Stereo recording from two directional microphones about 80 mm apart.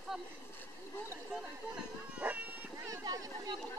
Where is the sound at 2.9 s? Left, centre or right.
Right.